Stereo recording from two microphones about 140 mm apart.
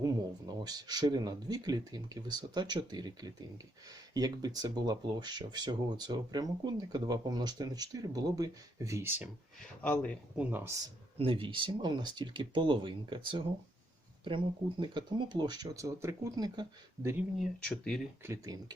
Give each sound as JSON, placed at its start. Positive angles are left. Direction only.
{"t": 0.0, "sound": "speech", "side_deg": -30}
{"t": 9.8, "sound": "speech", "side_deg": 10}
{"t": 10.3, "sound": "speech", "side_deg": -10}
{"t": 11.2, "sound": "speech", "side_deg": -40}
{"t": 17.3, "sound": "speech", "side_deg": 5}
{"t": 18.2, "sound": "speech", "side_deg": -20}